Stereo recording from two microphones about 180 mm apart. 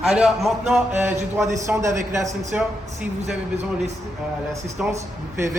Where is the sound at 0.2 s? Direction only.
Centre (ahead or behind).